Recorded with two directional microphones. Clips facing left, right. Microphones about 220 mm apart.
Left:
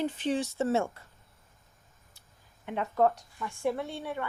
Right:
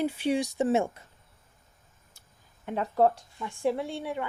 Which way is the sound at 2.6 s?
35° right (ahead or behind).